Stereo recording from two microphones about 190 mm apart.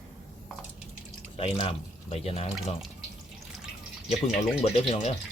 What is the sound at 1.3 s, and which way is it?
Speech, 30° left (ahead or behind).